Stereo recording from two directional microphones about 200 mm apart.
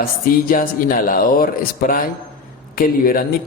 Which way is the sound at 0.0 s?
45° left (ahead or behind).